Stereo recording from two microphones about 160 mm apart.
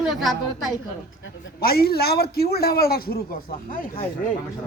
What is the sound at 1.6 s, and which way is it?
A man's voice, 75° left (ahead or behind).